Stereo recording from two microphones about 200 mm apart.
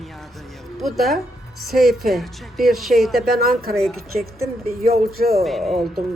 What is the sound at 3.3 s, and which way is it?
Speech, 50° right (ahead or behind).